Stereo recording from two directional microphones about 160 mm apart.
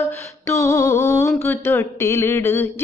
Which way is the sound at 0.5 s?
20° left (ahead or behind).